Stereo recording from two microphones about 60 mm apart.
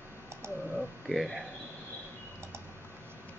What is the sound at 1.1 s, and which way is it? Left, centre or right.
Speech, centre.